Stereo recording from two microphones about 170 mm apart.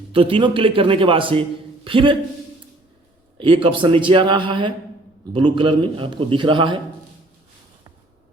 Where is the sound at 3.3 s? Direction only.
30° right (ahead or behind).